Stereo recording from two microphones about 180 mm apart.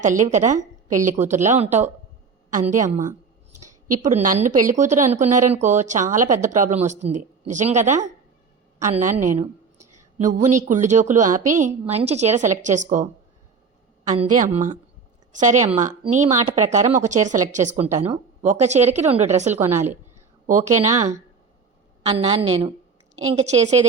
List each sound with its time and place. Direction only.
0.0 s speech: 45° right (ahead or behind)
10.2 s speech: 45° right (ahead or behind)
14.1 s speech: 40° right (ahead or behind)
17.9 s a woman's voice: 15° right (ahead or behind)
18.4 s speech: 40° right (ahead or behind)
19.5 s a woman's voice: 15° right (ahead or behind)
20.5 s speech: 40° right (ahead or behind)
23.5 s speech: 40° right (ahead or behind)